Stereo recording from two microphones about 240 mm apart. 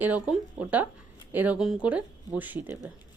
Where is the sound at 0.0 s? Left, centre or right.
Centre.